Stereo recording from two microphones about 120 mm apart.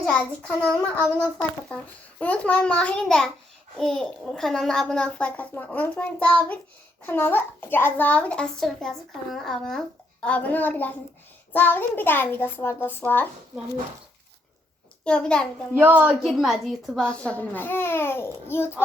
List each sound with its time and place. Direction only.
0.0 s a child's voice: 5° left (ahead or behind)
1.7 s a child's voice: 10° left (ahead or behind)
15.0 s a child's voice: 10° left (ahead or behind)
15.8 s a woman's voice: 15° right (ahead or behind)
16.2 s a child's voice: centre (ahead or behind); by 18.8 s 20° left (ahead or behind)